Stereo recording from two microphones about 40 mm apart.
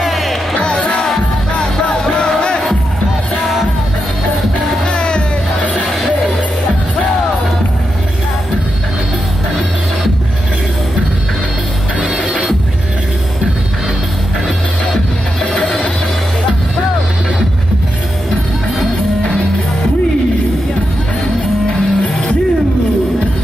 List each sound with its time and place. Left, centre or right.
0.0 s music: centre
0.6 s music: left
4.8 s music: left
21.6 s music: centre